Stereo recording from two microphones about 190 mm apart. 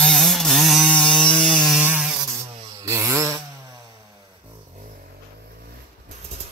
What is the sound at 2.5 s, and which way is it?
Chainsaw, 20° right (ahead or behind).